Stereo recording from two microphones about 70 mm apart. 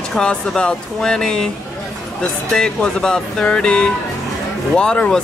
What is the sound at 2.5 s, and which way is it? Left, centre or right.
Speech, centre.